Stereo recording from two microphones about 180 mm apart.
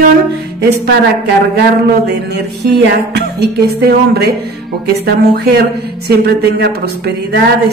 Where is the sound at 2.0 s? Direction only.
65° right (ahead or behind).